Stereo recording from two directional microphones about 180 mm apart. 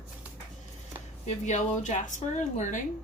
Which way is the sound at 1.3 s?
40° left (ahead or behind).